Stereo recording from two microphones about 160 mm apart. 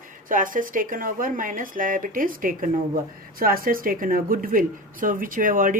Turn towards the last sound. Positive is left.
turn(degrees=-60)  # may be behind; listen again after turning